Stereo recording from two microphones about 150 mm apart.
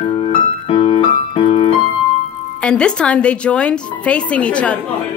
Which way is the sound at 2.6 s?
5° left (ahead or behind).